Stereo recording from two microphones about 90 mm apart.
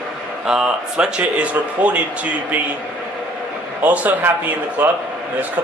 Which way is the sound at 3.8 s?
20° right (ahead or behind).